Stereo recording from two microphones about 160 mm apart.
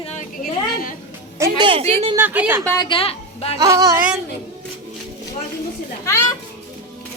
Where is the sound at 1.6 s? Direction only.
35° right (ahead or behind).